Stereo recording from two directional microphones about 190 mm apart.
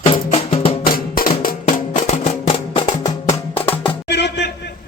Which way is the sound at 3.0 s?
15° left (ahead or behind).